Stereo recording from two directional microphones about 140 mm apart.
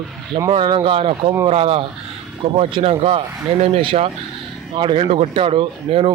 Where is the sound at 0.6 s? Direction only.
35° right (ahead or behind).